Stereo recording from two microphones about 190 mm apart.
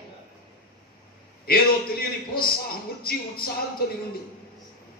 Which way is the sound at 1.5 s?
50° left (ahead or behind).